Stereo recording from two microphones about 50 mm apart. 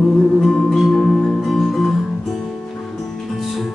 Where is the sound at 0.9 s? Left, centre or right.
Centre.